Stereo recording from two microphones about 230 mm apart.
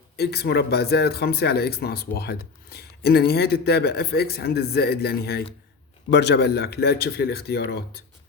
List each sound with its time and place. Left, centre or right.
0.2 s speech: left